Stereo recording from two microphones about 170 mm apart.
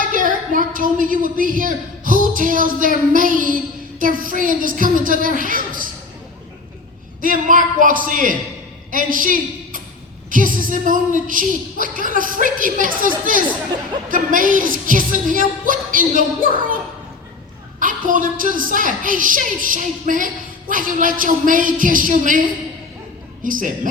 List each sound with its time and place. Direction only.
0.1 s a woman's voice: 50° right (ahead or behind)
7.2 s a woman's voice: 50° right (ahead or behind)
17.7 s a woman's voice: 50° right (ahead or behind)
23.4 s a woman's voice: 50° right (ahead or behind)